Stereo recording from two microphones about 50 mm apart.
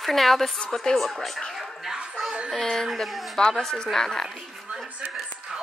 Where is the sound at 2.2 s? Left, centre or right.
Centre.